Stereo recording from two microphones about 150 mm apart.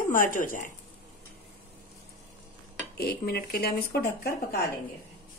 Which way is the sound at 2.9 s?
90° left.